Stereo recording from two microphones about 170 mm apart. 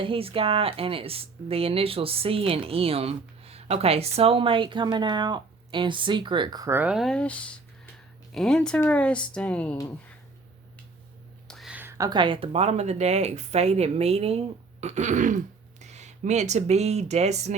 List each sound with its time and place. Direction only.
0.0 s a woman's voice: 35° right (ahead or behind); by 9.7 s 5° left (ahead or behind)
11.4 s a woman's voice: centre (ahead or behind); by 14.3 s 35° right (ahead or behind)
14.8 s throat clearing: 40° right (ahead or behind)
15.8 s speech: 40° right (ahead or behind)